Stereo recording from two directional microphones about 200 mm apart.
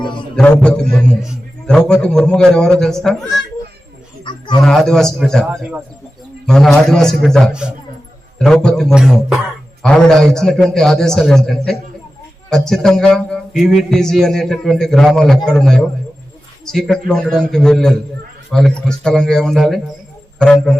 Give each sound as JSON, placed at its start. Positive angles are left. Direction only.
{"t": 0.3, "sound": "a man's voice", "side_deg": 5}
{"t": 4.2, "sound": "a sound", "side_deg": 20}
{"t": 4.6, "sound": "a man's voice", "side_deg": 0}